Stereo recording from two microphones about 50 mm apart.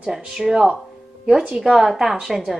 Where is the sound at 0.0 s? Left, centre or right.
Centre.